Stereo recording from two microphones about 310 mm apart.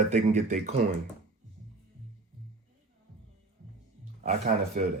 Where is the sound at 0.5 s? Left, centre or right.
Right.